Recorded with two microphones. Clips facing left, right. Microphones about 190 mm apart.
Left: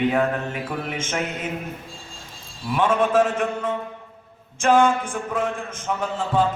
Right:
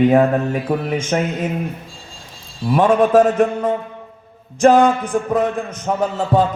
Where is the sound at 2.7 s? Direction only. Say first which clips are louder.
Right 6 dB; 40° right (ahead or behind).